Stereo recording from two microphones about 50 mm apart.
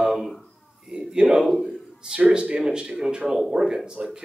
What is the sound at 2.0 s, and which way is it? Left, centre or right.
A man's voice, centre.